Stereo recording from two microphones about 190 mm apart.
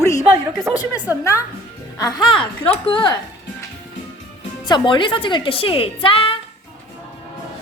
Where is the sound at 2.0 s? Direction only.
20° left (ahead or behind).